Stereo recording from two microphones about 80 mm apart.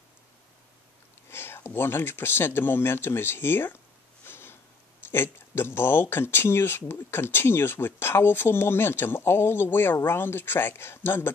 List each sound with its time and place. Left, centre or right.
1.3 s speech: left
4.2 s a sound: left
5.1 s speech: left